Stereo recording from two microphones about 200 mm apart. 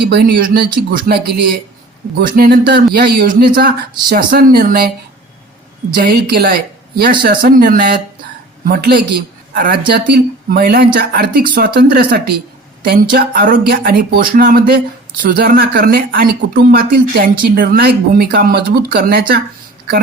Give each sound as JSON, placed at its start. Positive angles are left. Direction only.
{"t": 0.0, "sound": "speech", "side_deg": -55}
{"t": 5.9, "sound": "speech", "side_deg": -45}